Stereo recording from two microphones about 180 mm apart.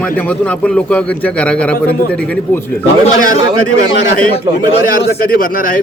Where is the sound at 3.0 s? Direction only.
45° left (ahead or behind).